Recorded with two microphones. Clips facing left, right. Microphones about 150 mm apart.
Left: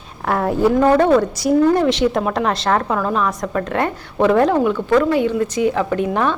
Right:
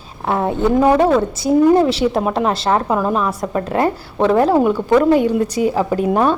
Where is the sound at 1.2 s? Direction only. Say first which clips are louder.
Even; 25° right (ahead or behind).